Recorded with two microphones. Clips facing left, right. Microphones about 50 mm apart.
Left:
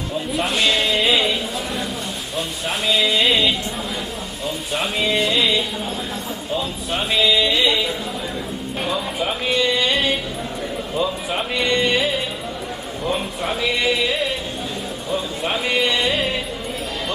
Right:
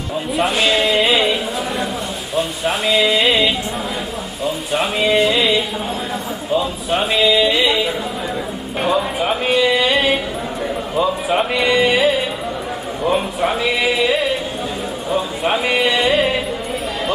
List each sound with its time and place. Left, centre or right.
0.3 s speech: centre
8.8 s speech: centre
9.5 s speech: centre
10.9 s speech: centre